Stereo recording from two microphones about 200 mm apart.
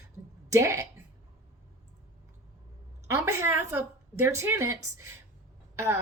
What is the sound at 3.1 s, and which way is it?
A woman's voice, 15° right (ahead or behind).